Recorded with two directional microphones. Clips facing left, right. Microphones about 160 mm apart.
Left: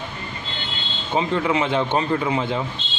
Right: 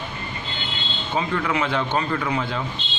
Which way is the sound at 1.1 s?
20° left (ahead or behind).